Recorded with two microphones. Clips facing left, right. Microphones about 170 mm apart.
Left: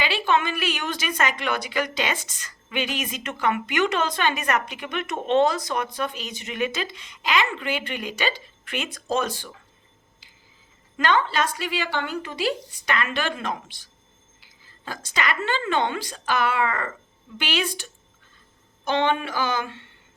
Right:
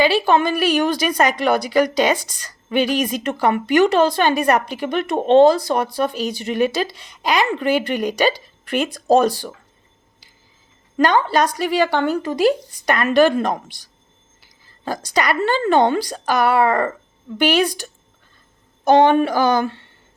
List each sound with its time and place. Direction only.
0.0 s a woman's voice: 40° right (ahead or behind)
10.9 s a woman's voice: 40° right (ahead or behind)
18.9 s a woman's voice: 40° right (ahead or behind)